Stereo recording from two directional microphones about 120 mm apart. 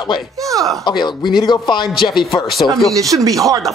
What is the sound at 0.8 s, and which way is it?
A man's voice, 40° left (ahead or behind).